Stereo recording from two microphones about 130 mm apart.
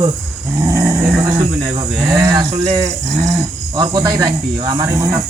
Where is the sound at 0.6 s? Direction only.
20° right (ahead or behind).